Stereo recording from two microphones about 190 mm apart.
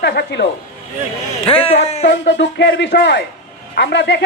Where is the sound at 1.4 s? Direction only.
30° left (ahead or behind).